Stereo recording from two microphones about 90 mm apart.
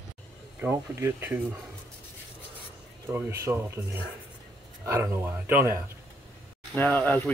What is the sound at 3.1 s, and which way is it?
Speech, 20° right (ahead or behind).